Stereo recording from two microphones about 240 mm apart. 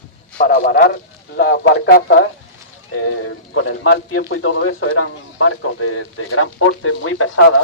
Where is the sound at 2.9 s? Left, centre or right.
Left.